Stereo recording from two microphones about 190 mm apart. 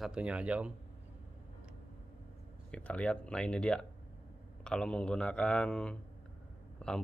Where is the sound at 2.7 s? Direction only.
5° left (ahead or behind).